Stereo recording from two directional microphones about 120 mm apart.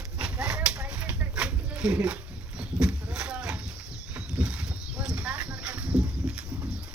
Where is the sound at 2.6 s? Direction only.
5° right (ahead or behind).